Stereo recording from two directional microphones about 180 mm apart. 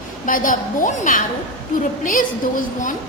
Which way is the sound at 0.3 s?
50° left (ahead or behind).